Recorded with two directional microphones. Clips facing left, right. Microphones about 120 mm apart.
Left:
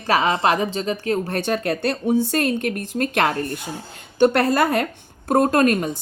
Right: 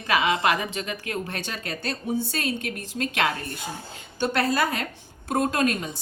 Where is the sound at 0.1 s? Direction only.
35° left (ahead or behind).